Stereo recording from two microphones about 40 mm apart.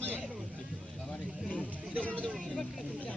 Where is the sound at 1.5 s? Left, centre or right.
Left.